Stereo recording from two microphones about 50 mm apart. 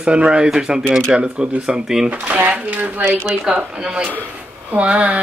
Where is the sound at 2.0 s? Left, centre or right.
Right.